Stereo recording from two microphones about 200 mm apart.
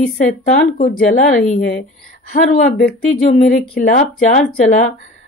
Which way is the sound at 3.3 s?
40° left (ahead or behind).